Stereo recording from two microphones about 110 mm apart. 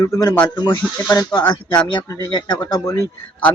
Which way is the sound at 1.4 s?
20° left (ahead or behind).